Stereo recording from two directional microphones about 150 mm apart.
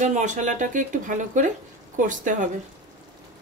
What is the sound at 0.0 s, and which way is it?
Speech, 55° right (ahead or behind).